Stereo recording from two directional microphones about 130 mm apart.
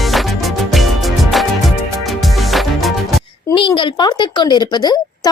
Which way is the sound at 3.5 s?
40° left (ahead or behind).